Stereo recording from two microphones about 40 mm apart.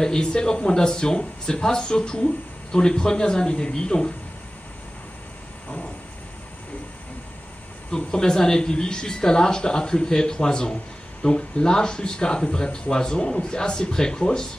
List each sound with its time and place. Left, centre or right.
0.0 s speech: centre
7.9 s speech: centre